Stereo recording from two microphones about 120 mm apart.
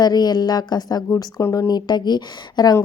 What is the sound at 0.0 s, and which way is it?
Speech, 35° left (ahead or behind).